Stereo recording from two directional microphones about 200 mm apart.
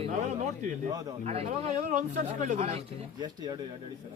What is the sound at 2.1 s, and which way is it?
Speech, 40° right (ahead or behind).